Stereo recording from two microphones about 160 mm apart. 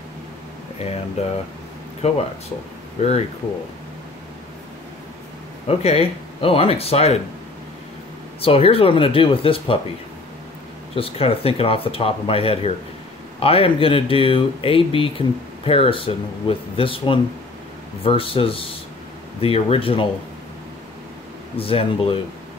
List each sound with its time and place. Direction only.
0.8 s speech: 40° left (ahead or behind)
5.7 s speech: 40° left (ahead or behind)
8.4 s speech: 35° left (ahead or behind)
11.0 s speech: 35° left (ahead or behind)
21.5 s speech: 35° left (ahead or behind)